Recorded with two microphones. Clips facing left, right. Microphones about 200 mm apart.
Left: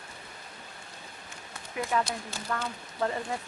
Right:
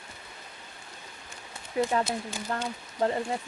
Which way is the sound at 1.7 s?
30° right (ahead or behind).